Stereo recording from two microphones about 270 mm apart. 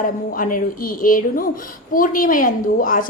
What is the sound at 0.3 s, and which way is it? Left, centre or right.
A woman's voice, left.